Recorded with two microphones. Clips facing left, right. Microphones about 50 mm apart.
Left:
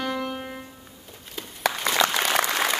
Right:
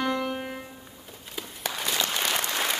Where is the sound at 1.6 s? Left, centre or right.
Left.